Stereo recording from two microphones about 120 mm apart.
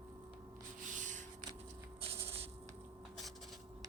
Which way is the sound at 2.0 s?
55° right (ahead or behind).